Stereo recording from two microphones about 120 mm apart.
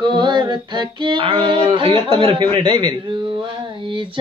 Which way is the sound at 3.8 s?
45° right (ahead or behind).